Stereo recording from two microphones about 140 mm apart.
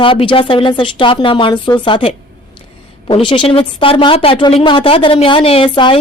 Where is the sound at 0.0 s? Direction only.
40° left (ahead or behind).